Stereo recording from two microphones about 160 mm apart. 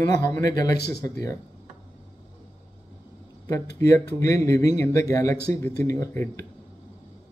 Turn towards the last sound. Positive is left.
turn(degrees=20)  # may be behind; listen again after turning